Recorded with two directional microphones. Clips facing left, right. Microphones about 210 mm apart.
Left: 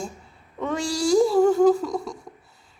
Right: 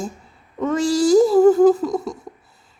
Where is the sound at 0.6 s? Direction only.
Centre (ahead or behind).